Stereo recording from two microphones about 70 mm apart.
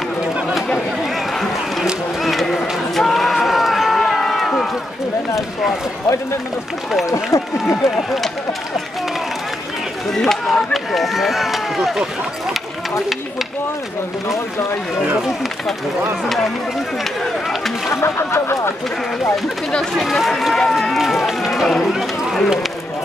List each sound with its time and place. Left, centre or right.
1.3 s a sound: centre
2.2 s run: centre
7.6 s speech: centre
10.1 s speech: centre
16.3 s speech: centre
17.0 s run: centre
17.8 s speech: left
19.7 s speech: centre